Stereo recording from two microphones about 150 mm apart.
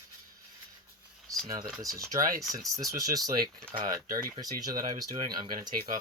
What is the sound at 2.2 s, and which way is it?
Speech, 65° right (ahead or behind).